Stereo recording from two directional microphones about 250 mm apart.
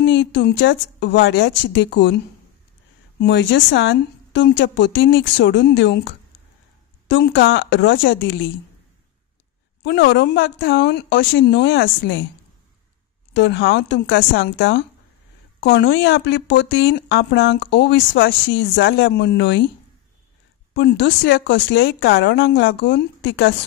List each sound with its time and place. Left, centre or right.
0.0 s speech: left
9.8 s speech: left
13.3 s speech: left
20.7 s speech: left